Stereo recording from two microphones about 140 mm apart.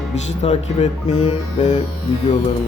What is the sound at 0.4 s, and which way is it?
Speech, 50° left (ahead or behind).